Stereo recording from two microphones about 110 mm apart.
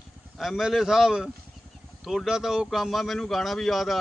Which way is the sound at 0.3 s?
Centre (ahead or behind).